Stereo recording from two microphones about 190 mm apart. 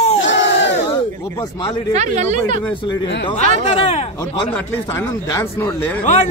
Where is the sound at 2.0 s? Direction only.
40° right (ahead or behind).